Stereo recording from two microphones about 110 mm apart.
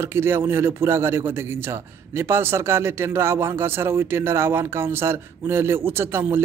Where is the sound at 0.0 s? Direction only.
20° right (ahead or behind).